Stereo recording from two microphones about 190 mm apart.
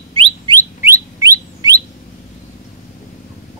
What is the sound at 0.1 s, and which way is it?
Bird, 30° right (ahead or behind).